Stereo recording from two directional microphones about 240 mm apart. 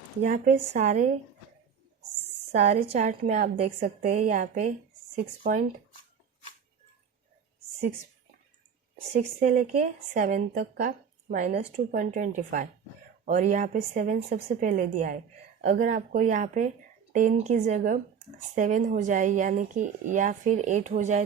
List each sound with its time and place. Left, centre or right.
0.2 s speech: right
2.5 s a woman's voice: right
9.1 s speech: right